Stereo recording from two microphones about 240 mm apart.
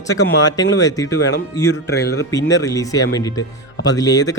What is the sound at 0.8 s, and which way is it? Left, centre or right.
Speech, centre.